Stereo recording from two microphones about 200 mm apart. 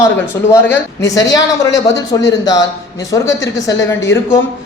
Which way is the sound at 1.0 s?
15° left (ahead or behind).